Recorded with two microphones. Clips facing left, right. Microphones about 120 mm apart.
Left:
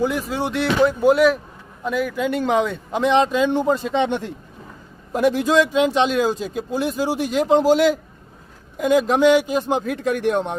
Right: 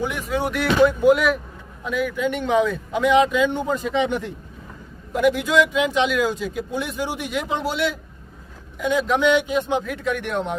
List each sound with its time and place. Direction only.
0.1 s a man's voice: 35° left (ahead or behind)